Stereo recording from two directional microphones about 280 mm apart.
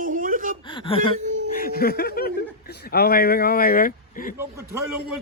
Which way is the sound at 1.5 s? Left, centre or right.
Left.